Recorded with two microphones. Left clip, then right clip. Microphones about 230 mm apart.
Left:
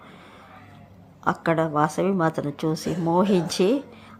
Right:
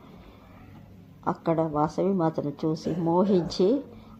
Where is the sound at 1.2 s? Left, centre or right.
Left.